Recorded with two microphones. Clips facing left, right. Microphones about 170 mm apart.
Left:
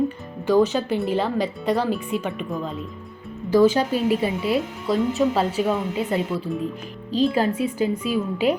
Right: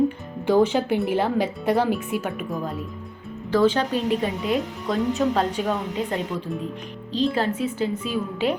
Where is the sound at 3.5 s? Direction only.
10° left (ahead or behind).